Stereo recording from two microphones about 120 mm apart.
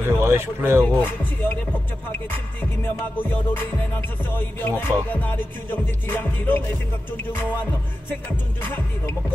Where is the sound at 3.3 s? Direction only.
15° left (ahead or behind).